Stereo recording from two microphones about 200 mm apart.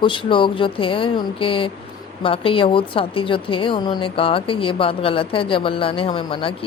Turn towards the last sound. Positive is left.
turn(degrees=25)  # may be behind; listen again after turning